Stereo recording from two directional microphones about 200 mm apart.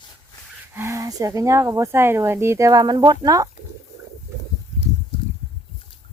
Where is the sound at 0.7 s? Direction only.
15° right (ahead or behind).